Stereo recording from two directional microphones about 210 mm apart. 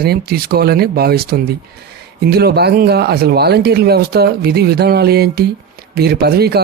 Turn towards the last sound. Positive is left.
turn(degrees=-50)  # may be behind; listen again after turning